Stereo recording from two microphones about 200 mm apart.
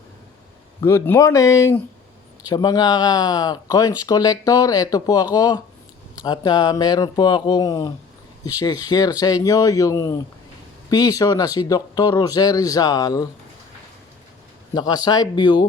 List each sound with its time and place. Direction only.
0.8 s speech: 10° left (ahead or behind)
14.8 s speech: 20° left (ahead or behind)